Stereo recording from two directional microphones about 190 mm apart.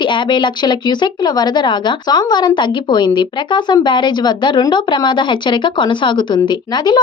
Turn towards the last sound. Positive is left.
turn(degrees=25)  # may be behind; listen again after turning